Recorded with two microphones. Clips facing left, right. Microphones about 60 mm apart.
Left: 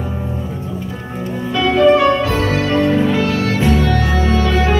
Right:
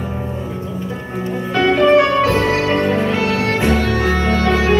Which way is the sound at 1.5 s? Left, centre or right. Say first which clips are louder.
Even; right.